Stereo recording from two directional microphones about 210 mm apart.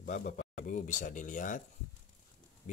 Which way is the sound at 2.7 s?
35° left (ahead or behind).